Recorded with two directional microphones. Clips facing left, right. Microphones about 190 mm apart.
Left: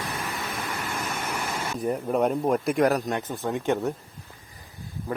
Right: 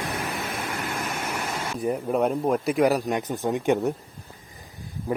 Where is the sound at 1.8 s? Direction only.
5° right (ahead or behind).